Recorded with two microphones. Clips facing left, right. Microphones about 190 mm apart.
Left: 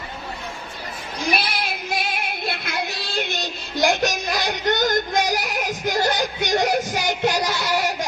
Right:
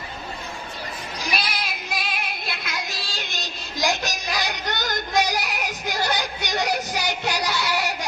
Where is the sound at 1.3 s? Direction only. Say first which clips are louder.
Left 5 dB; 55° left (ahead or behind).